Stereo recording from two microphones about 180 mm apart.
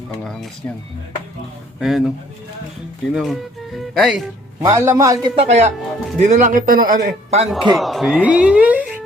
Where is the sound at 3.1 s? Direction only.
Centre (ahead or behind).